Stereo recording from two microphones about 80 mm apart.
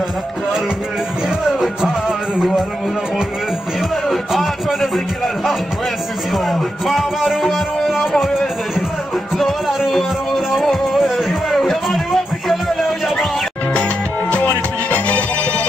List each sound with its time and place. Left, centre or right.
1.6 s music: centre
3.9 s speech: centre
9.4 s music: centre
14.3 s music: centre